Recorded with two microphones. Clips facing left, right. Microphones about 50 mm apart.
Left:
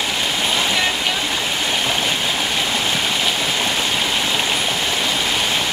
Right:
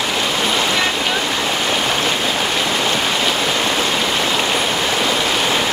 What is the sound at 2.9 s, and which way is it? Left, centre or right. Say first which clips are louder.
Rain: right 2 dB; centre.